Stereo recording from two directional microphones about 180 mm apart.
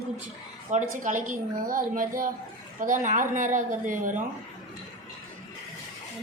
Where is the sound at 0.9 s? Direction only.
45° right (ahead or behind).